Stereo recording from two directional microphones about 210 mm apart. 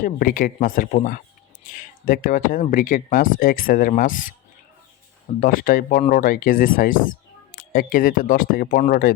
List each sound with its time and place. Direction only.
0.0 s speech: 40° left (ahead or behind)
5.4 s speech: 40° left (ahead or behind)